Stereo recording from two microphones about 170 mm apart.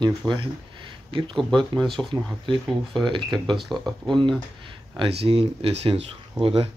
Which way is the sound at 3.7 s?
20° right (ahead or behind).